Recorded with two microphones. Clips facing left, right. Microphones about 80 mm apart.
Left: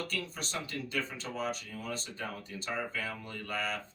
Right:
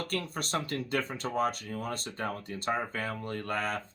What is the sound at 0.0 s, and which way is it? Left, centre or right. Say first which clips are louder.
Speech: right 4 dB; right.